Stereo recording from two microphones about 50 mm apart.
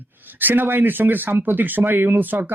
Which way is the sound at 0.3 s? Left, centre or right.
Right.